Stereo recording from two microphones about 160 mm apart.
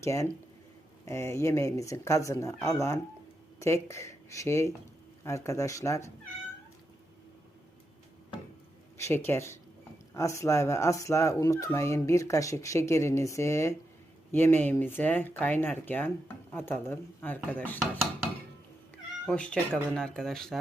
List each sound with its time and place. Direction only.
0.0 s speech: 20° left (ahead or behind)
9.0 s speech: 15° left (ahead or behind)
19.3 s speech: 5° left (ahead or behind)